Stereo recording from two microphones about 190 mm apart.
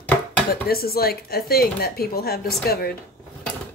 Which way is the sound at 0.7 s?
55° left (ahead or behind).